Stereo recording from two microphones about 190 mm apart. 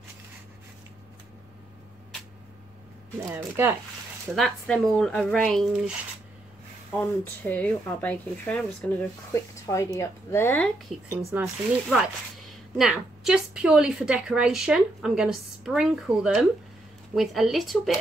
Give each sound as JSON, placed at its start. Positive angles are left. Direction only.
{"t": 3.3, "sound": "speech", "side_deg": -10}
{"t": 4.4, "sound": "a woman's voice", "side_deg": 0}
{"t": 7.0, "sound": "speech", "side_deg": 10}
{"t": 11.1, "sound": "speech", "side_deg": -15}
{"t": 12.7, "sound": "a woman's voice", "side_deg": 0}